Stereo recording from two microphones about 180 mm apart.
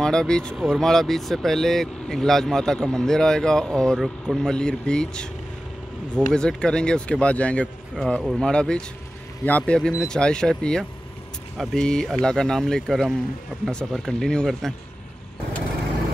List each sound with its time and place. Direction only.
0.0 s speech: 5° left (ahead or behind)
6.3 s speech: 5° left (ahead or behind)